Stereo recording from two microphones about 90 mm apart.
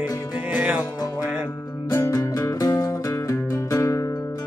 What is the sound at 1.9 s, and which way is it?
Music, 35° left (ahead or behind).